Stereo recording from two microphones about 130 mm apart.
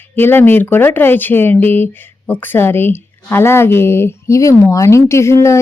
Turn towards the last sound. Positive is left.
turn(degrees=20)  # may be behind; listen again after turning